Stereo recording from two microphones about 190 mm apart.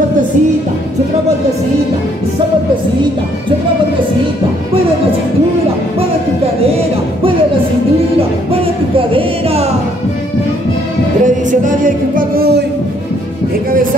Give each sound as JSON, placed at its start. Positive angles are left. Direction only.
{"t": 8.5, "sound": "music", "side_deg": -30}
{"t": 11.2, "sound": "music", "side_deg": -45}